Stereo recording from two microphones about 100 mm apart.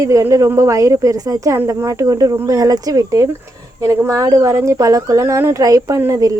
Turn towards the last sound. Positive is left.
turn(degrees=-30)  # may be behind; listen again after turning